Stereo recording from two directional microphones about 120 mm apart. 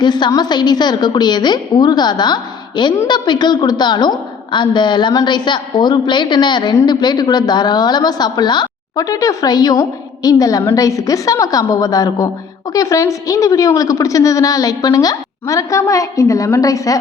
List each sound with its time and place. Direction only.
0.0 s a woman's voice: 35° left (ahead or behind)